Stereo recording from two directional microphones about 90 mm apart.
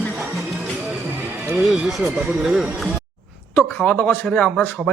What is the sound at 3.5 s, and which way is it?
Speech, 15° left (ahead or behind).